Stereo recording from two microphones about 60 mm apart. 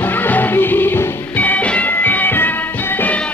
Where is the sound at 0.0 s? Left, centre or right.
Left.